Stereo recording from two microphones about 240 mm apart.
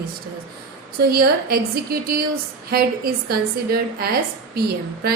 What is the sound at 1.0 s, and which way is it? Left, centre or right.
A woman's voice, right.